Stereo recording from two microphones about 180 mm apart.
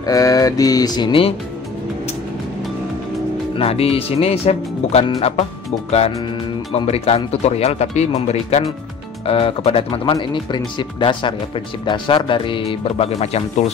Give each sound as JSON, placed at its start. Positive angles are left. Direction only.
{"t": 0.0, "sound": "speech", "side_deg": 20}
{"t": 3.5, "sound": "speech", "side_deg": 35}